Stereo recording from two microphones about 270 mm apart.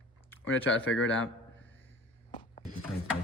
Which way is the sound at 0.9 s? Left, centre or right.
Left.